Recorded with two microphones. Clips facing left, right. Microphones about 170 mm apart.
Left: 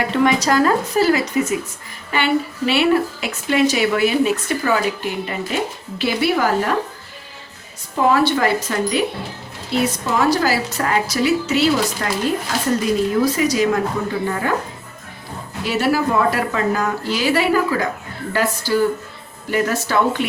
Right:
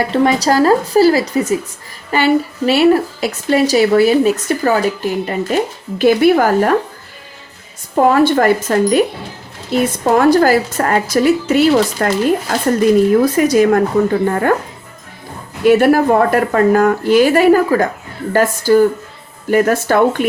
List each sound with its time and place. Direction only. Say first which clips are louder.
0.1 s a woman's voice: right 2 dB; 35° right (ahead or behind); by 6.7 s 50° right (ahead or behind)
7.9 s a woman's voice: right 5 dB; 50° right (ahead or behind)
15.6 s a woman's voice: right 9 dB; 55° right (ahead or behind)